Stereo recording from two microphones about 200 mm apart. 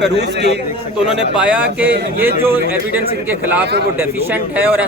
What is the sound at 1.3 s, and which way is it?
A man's voice, 5° right (ahead or behind).